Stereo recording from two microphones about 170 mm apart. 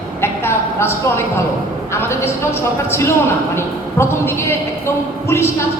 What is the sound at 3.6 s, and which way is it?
A man's voice, 15° left (ahead or behind).